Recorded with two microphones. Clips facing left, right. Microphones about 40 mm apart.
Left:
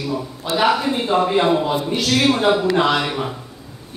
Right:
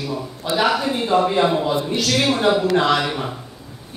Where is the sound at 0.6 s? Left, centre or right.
Centre.